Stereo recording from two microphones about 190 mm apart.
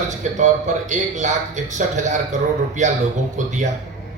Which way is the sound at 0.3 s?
40° right (ahead or behind).